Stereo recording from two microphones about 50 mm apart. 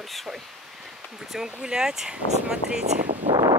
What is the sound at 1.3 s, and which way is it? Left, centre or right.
Speech, centre.